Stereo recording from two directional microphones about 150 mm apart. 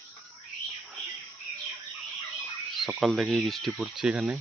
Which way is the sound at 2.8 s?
Centre (ahead or behind).